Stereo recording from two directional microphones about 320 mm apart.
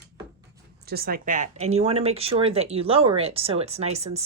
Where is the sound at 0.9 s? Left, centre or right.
Right.